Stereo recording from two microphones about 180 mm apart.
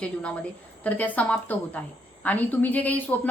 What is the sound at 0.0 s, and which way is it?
A woman's voice, 5° left (ahead or behind).